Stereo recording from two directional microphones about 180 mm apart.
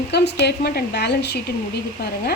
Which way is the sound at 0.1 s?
65° left (ahead or behind).